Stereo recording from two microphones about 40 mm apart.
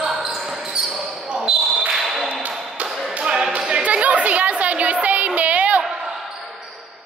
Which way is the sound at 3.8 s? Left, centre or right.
Right.